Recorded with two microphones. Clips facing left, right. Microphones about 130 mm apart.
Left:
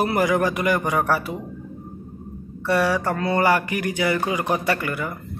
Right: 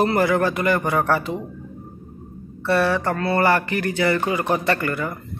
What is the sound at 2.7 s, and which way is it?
A man's voice, 15° left (ahead or behind).